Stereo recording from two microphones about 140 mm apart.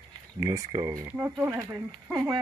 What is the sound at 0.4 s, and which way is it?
Speech, 30° right (ahead or behind).